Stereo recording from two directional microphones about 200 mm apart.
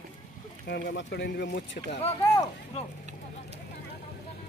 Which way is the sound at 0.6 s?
55° left (ahead or behind).